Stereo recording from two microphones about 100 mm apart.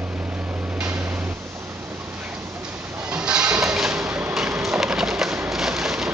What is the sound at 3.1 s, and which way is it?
Music, 10° right (ahead or behind).